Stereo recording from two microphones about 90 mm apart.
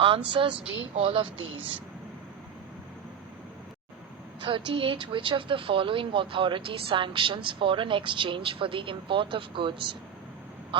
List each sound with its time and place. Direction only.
0.3 s speech: 70° right (ahead or behind)
0.9 s speech: 90° right; by 1.8 s 75° right (ahead or behind)
4.4 s speech: 75° right (ahead or behind)